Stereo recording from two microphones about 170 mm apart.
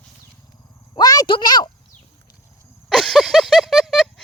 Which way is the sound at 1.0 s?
25° left (ahead or behind).